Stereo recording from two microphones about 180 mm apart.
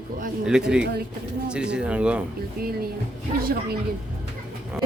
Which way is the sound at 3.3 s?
55° right (ahead or behind).